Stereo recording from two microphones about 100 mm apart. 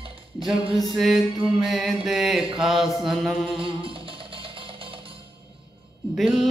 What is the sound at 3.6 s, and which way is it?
Music, 60° right (ahead or behind).